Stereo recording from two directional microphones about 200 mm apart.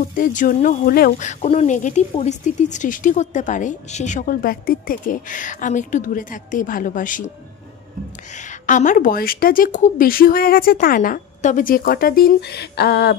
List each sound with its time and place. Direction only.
0.1 s speech: 40° left (ahead or behind)
8.4 s a woman's voice: 40° left (ahead or behind); by 13.1 s 55° left (ahead or behind)